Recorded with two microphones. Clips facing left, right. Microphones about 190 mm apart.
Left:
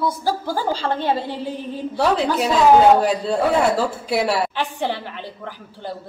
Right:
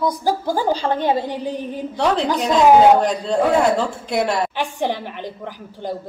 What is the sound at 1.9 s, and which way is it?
A woman's voice, 5° left (ahead or behind).